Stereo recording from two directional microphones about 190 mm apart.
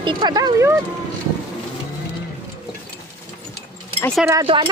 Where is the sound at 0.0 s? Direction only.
25° right (ahead or behind).